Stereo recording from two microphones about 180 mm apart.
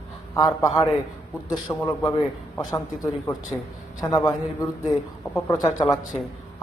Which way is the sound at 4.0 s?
20° left (ahead or behind).